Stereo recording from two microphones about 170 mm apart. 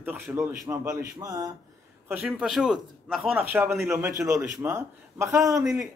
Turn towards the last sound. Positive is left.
turn(degrees=0)  # may be behind; listen again after turning